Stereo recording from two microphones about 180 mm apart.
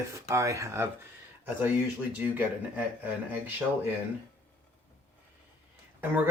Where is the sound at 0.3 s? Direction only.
15° right (ahead or behind).